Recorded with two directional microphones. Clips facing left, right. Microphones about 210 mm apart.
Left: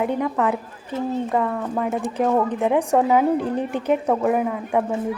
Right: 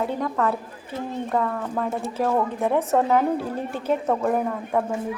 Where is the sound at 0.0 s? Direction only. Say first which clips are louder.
Left 3 dB; 15° left (ahead or behind).